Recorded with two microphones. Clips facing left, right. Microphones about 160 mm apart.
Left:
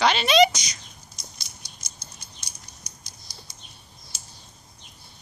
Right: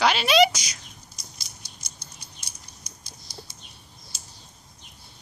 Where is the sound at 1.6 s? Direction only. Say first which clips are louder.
Even; 30° right (ahead or behind).